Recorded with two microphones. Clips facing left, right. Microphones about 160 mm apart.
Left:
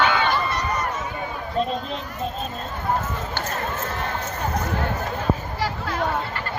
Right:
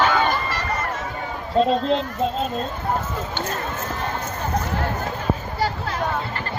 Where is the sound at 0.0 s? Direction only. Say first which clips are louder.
Right 1 dB; 40° right (ahead or behind).